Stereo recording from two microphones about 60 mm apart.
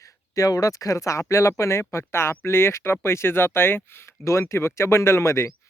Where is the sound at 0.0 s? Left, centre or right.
Left.